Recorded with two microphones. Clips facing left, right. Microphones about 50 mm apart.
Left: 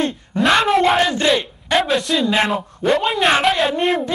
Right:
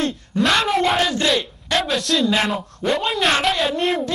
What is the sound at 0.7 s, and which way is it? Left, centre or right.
Speech, centre.